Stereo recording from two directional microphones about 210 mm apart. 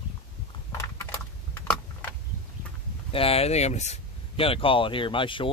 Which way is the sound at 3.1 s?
25° left (ahead or behind).